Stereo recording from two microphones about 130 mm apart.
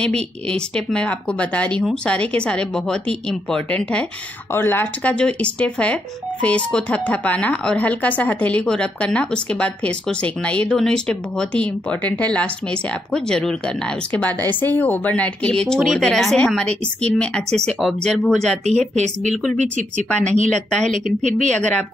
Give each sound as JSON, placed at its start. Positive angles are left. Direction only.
{"t": 0.0, "sound": "speech", "side_deg": 5}
{"t": 18.8, "sound": "speech", "side_deg": -60}
{"t": 19.3, "sound": "speech", "side_deg": 0}
{"t": 20.9, "sound": "speech", "side_deg": -75}
{"t": 21.5, "sound": "speech", "side_deg": 10}